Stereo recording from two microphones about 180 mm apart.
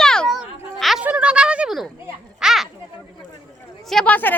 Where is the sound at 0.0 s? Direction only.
5° left (ahead or behind).